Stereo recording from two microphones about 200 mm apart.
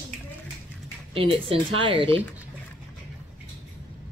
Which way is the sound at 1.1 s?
25° right (ahead or behind).